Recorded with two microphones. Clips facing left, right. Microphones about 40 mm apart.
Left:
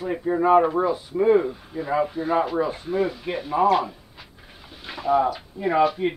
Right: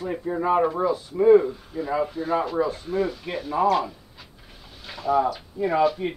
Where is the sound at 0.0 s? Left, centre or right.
Centre.